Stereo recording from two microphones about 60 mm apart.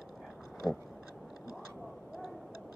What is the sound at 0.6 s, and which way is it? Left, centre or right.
Speech, centre.